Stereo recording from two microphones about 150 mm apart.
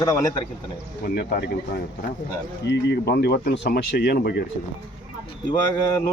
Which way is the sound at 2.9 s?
90° left.